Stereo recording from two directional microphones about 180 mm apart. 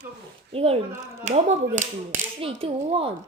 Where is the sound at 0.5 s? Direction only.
35° right (ahead or behind).